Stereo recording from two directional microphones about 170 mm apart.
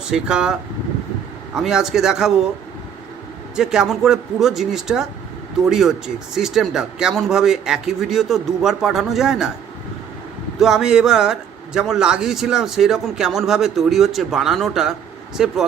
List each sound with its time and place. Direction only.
0.1 s speech: 5° right (ahead or behind)
1.5 s speech: centre (ahead or behind)
3.5 s speech: 5° right (ahead or behind)
10.6 s speech: 5° right (ahead or behind)